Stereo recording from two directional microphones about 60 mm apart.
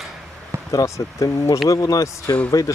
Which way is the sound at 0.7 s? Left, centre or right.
Left.